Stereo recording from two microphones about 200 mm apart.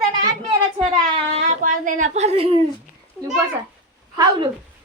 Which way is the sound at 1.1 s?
35° right (ahead or behind).